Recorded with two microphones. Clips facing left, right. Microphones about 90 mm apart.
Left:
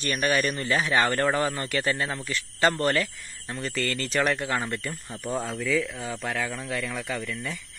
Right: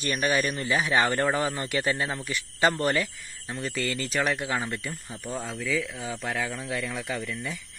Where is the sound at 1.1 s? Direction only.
5° right (ahead or behind).